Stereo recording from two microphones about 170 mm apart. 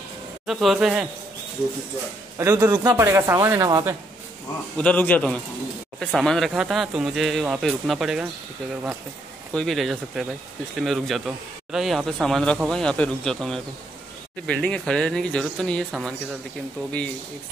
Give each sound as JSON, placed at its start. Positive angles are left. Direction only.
{"t": 0.5, "sound": "speech", "side_deg": 0}
{"t": 2.3, "sound": "a man's voice", "side_deg": -20}
{"t": 4.7, "sound": "a man's voice", "side_deg": 10}
{"t": 9.5, "sound": "speech", "side_deg": 5}